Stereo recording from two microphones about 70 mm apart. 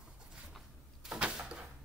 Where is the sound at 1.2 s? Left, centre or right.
Centre.